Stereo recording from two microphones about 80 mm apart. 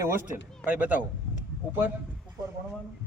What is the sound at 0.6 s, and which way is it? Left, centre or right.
Speech, centre.